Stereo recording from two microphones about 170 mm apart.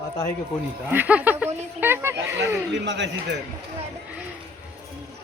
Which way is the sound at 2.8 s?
90° right.